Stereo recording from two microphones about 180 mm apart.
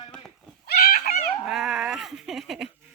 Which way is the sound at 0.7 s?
60° left (ahead or behind).